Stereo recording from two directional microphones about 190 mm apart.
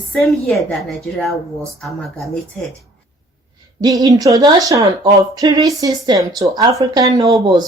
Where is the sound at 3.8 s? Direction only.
20° right (ahead or behind).